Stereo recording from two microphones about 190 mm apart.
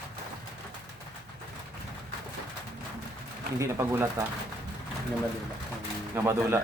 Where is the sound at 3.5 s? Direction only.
15° right (ahead or behind).